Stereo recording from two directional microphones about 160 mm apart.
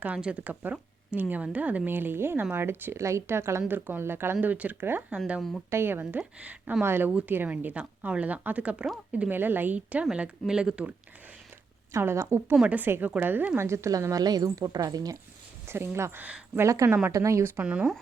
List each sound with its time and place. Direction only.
0.0 s speech: 10° right (ahead or behind)
11.9 s a woman's voice: 15° right (ahead or behind)
17.6 s speech: 5° right (ahead or behind)